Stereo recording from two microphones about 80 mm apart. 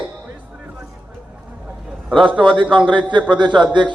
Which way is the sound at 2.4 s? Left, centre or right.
Right.